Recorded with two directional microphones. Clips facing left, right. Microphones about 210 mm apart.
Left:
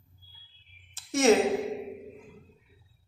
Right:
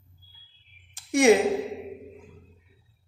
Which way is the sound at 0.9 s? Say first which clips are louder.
Right 3 dB; 15° right (ahead or behind).